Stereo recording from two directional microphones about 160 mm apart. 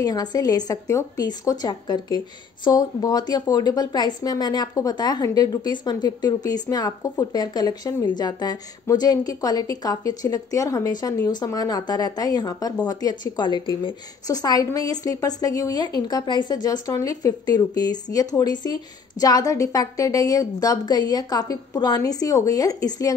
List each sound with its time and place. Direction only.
0.0 s a woman's voice: 25° left (ahead or behind)